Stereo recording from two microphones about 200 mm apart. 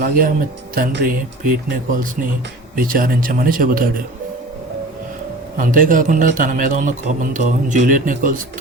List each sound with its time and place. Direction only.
0.0 s speech: 45° right (ahead or behind)
2.7 s speech: 45° right (ahead or behind)
5.5 s a man's voice: 40° right (ahead or behind)